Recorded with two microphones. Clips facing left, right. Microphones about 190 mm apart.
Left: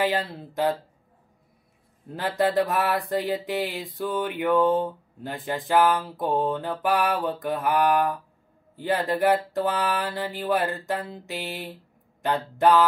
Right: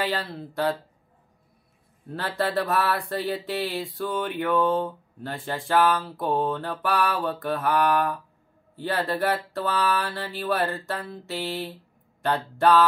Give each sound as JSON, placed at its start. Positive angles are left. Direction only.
{"t": 0.0, "sound": "speech", "side_deg": 15}
{"t": 2.1, "sound": "speech", "side_deg": 15}